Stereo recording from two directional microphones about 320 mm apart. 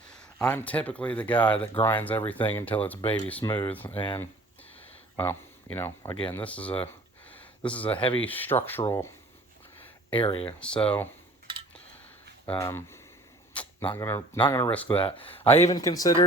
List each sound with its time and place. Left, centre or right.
0.3 s speech: centre
7.9 s speech: centre
8.2 s speech: centre
10.1 s speech: centre
10.4 s speech: centre
12.5 s speech: centre
13.5 s arrow: centre
13.8 s speech: centre
14.9 s speech: centre